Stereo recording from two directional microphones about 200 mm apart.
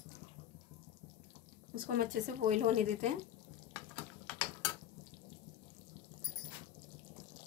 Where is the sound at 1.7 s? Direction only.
45° right (ahead or behind).